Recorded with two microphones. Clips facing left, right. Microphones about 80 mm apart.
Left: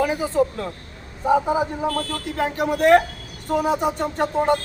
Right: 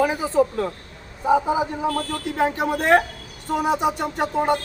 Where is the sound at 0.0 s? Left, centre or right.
Right.